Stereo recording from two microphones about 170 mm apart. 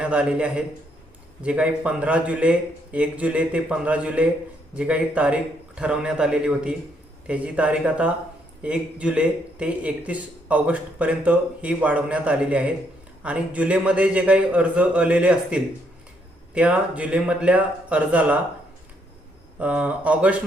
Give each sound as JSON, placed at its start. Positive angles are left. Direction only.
{"t": 0.0, "sound": "a man's voice", "side_deg": -5}
{"t": 19.5, "sound": "a man's voice", "side_deg": -10}